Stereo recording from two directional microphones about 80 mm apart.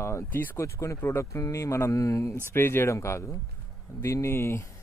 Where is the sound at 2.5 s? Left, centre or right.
Left.